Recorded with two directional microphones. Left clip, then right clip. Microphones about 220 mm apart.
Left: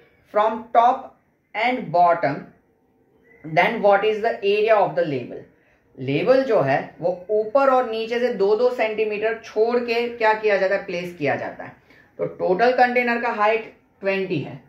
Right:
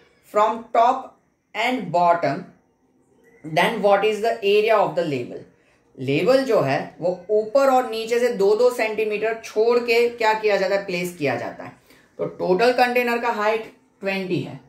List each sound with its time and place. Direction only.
0.3 s speech: 15° right (ahead or behind)
3.5 s a woman's voice: 15° right (ahead or behind)